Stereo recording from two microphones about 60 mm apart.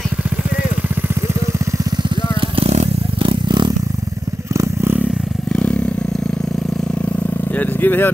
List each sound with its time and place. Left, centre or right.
5.5 s vehicle: centre
7.5 s vehicle: left